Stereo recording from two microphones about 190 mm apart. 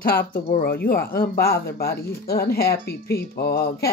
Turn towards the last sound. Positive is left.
turn(degrees=55)  # may be behind; listen again after turning